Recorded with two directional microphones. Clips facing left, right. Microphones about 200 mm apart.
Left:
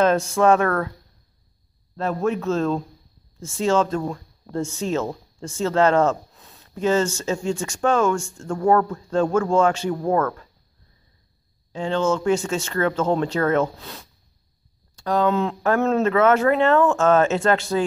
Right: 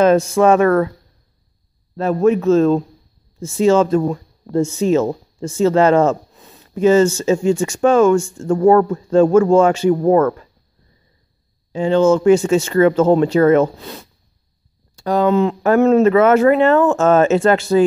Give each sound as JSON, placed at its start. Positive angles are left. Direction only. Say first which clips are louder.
{"t": 0.0, "sound": "speech", "louder": "right 5 dB", "side_deg": -5}
{"t": 2.0, "sound": "speech", "louder": "right 8 dB", "side_deg": -5}
{"t": 11.7, "sound": "speech", "louder": "right 8 dB", "side_deg": -10}